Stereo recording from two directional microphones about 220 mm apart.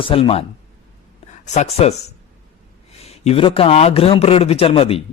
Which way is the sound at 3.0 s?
30° left (ahead or behind).